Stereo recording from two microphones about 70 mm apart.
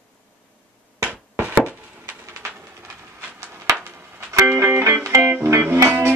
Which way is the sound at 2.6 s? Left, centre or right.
Right.